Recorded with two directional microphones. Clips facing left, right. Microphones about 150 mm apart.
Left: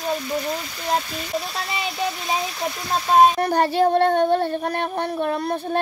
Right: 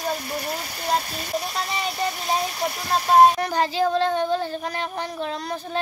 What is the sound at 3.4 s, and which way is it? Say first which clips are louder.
A child's voice: left 4 dB; 60° left (ahead or behind).